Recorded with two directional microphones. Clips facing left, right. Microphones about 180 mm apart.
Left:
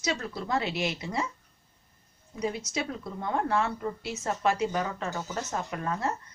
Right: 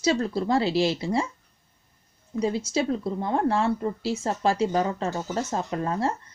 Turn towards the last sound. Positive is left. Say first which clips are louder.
# right 5 dB
turn(degrees=-30)  # may be behind; listen again after turning